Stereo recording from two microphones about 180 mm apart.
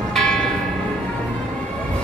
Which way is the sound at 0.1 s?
Centre (ahead or behind).